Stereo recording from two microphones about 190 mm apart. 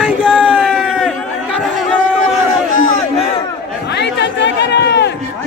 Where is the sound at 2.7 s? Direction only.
45° left (ahead or behind).